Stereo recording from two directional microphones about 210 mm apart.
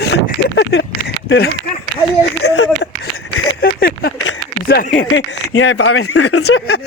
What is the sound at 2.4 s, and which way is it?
Speech, 90° left.